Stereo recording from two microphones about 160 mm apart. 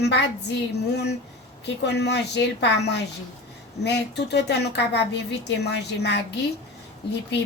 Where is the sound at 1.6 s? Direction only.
90° left.